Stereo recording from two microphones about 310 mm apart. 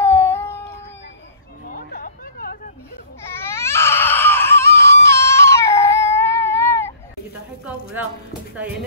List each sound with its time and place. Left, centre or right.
0.0 s cat: centre
1.7 s a sound: left
3.3 s baby cry: centre